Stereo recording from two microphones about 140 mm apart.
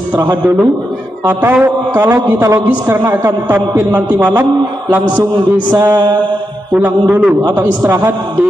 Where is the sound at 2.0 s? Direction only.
20° right (ahead or behind).